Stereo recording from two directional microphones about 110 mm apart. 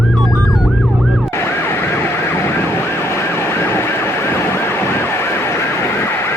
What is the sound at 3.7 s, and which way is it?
Vehicle, 25° left (ahead or behind).